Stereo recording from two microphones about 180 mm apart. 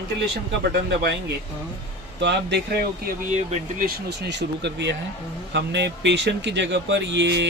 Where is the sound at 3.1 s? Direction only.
40° right (ahead or behind).